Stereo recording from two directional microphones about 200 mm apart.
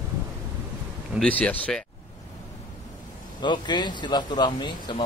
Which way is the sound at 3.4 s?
20° left (ahead or behind).